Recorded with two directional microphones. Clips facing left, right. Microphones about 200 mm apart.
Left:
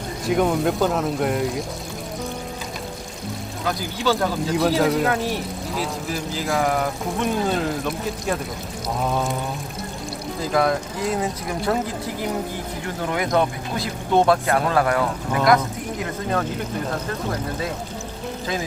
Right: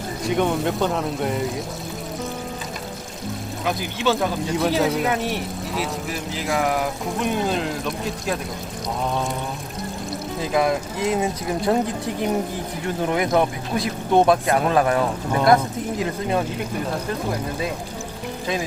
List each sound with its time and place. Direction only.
0.3 s speech: centre (ahead or behind)
4.2 s speech: centre (ahead or behind)
10.5 s speech: 15° right (ahead or behind)
13.0 s speech: 20° right (ahead or behind)